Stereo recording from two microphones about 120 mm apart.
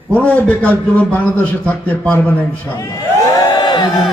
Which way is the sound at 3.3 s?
35° left (ahead or behind).